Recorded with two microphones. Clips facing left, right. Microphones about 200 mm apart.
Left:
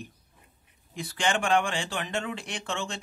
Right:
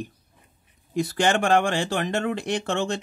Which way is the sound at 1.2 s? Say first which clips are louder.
Right 4 dB; 65° right (ahead or behind).